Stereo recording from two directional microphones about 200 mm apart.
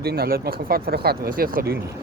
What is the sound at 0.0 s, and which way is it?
Speech, 50° right (ahead or behind).